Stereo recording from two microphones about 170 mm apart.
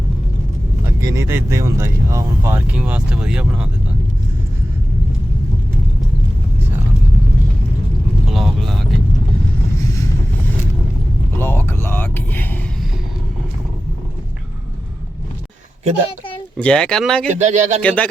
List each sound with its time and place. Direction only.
1.0 s speech: 15° right (ahead or behind)
8.3 s vehicle: centre (ahead or behind)
11.3 s music: 15° left (ahead or behind)
16.6 s speech: 5° left (ahead or behind)
17.2 s speech: 45° right (ahead or behind)
17.8 s speech: 10° left (ahead or behind)